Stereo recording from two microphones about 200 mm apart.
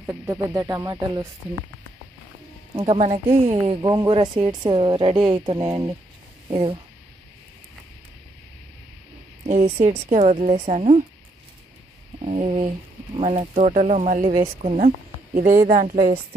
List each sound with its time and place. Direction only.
0.0 s speech: 15° right (ahead or behind)
2.7 s speech: 25° right (ahead or behind)
9.5 s speech: 35° right (ahead or behind)
12.3 s speech: 30° right (ahead or behind)
15.7 s a woman's voice: 45° right (ahead or behind)